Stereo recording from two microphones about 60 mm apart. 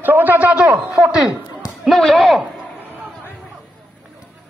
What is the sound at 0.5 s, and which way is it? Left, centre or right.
Speech, centre.